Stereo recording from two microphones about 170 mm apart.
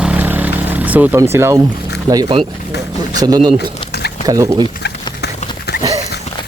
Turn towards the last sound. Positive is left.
turn(degrees=70)  # may be behind; listen again after turning